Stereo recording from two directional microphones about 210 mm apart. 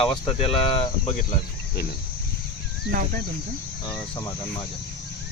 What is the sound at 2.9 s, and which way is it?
Speech, 45° right (ahead or behind).